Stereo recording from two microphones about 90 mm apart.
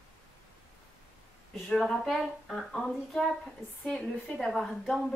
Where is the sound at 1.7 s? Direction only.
5° left (ahead or behind).